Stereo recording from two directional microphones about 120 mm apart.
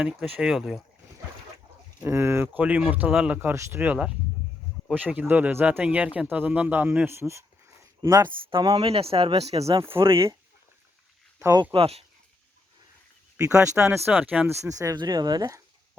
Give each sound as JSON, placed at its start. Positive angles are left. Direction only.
{"t": 0.0, "sound": "speech", "side_deg": -10}
{"t": 2.0, "sound": "speech", "side_deg": -20}
{"t": 5.3, "sound": "speech", "side_deg": -15}
{"t": 8.3, "sound": "speech", "side_deg": -45}
{"t": 9.8, "sound": "speech", "side_deg": -20}
{"t": 11.3, "sound": "speech", "side_deg": -25}
{"t": 11.6, "sound": "speech", "side_deg": -50}
{"t": 13.4, "sound": "speech", "side_deg": -25}
{"t": 14.6, "sound": "speech", "side_deg": -25}